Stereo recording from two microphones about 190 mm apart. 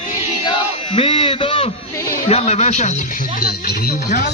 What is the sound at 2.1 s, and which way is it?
Speech, 35° left (ahead or behind).